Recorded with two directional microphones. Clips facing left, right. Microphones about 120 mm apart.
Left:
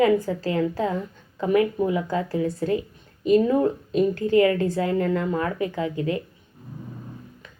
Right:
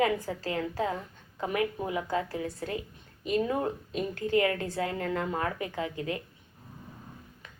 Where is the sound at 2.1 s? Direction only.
30° left (ahead or behind).